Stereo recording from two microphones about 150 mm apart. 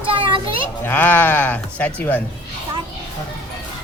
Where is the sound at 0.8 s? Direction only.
10° left (ahead or behind).